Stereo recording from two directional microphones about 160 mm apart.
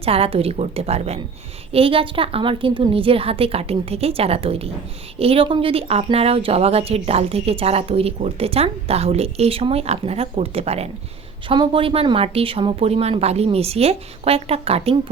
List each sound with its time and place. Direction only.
0.0 s a woman's voice: 40° right (ahead or behind)